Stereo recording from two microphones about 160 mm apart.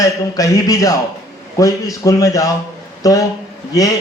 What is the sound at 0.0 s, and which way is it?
A man's voice, 20° left (ahead or behind).